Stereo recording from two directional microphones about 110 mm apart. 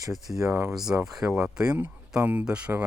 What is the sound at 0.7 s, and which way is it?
Speech, 5° right (ahead or behind).